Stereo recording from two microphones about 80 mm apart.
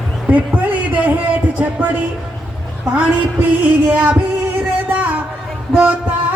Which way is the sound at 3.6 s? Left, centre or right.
Centre.